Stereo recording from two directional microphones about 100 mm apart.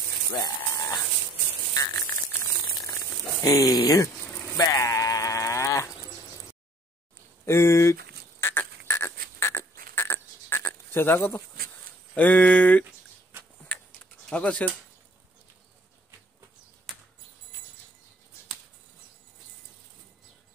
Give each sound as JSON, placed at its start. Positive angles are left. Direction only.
{"t": 0.7, "sound": "a sound", "side_deg": 35}
{"t": 3.4, "sound": "speech", "side_deg": 40}
{"t": 4.6, "sound": "sheep", "side_deg": 35}
{"t": 7.4, "sound": "frog", "side_deg": 25}
{"t": 12.2, "sound": "speech", "side_deg": 10}
{"t": 14.3, "sound": "speech", "side_deg": 15}
{"t": 16.9, "sound": "a sound", "side_deg": 5}